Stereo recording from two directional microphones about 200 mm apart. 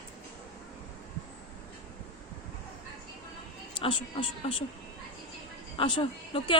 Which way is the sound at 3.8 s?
25° left (ahead or behind).